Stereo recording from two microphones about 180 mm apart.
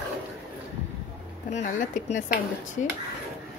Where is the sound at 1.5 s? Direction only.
45° left (ahead or behind).